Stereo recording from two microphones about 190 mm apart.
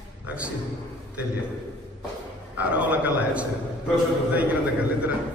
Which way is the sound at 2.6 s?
5° right (ahead or behind).